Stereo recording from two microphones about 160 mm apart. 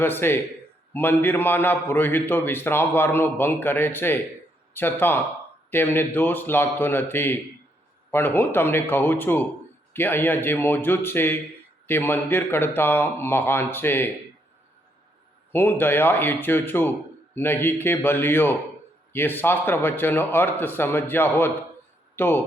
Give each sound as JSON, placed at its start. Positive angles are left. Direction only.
{"t": 0.0, "sound": "a man's voice", "side_deg": 15}
{"t": 15.5, "sound": "a man's voice", "side_deg": 15}